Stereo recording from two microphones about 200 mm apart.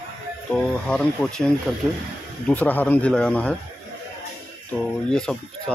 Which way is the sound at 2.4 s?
10° left (ahead or behind).